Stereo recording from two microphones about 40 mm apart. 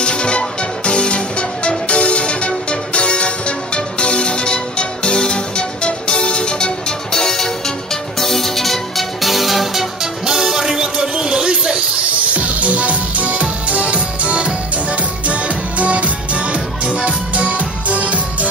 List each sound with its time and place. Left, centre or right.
0.0 s music: left; by 9.8 s centre
10.2 s music: centre
17.3 s music: right